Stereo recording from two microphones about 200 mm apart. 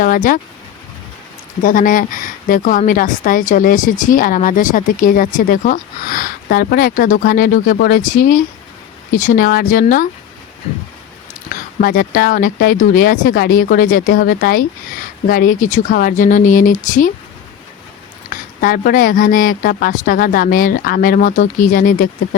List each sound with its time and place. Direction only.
0.0 s speech: 45° left (ahead or behind)
1.6 s speech: 40° left (ahead or behind)
11.8 s speech: 45° left (ahead or behind)
18.3 s speech: 45° left (ahead or behind)